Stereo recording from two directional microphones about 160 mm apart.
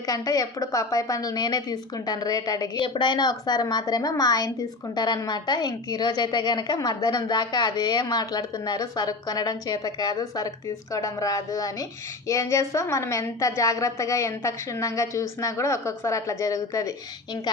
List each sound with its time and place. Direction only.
0.1 s a woman's voice: 25° left (ahead or behind)